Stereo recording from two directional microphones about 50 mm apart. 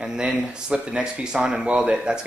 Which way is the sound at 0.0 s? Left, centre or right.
Centre.